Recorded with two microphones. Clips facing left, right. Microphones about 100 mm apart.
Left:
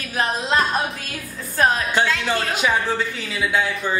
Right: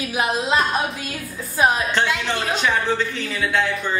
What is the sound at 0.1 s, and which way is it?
Speech, 10° right (ahead or behind).